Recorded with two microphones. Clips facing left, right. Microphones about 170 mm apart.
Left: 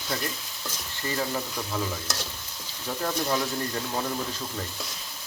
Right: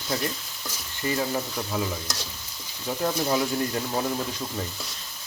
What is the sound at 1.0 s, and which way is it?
Speech, 15° right (ahead or behind).